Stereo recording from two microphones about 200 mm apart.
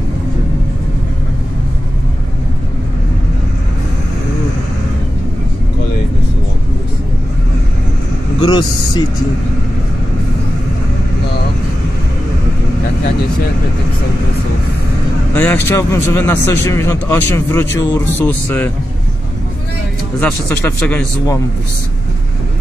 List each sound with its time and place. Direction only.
8.4 s speech: 20° left (ahead or behind)
15.3 s a man's voice: 10° left (ahead or behind)
20.2 s a man's voice: 5° left (ahead or behind)